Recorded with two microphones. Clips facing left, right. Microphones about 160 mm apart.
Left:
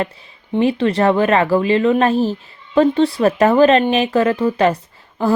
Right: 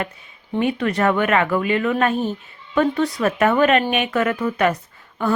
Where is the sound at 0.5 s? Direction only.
30° left (ahead or behind).